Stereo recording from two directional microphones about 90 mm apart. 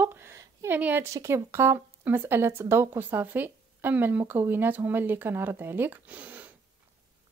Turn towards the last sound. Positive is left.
turn(degrees=-20)  # may be behind; listen again after turning